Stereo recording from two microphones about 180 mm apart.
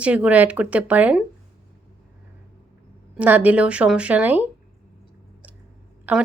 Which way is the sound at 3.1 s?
10° right (ahead or behind).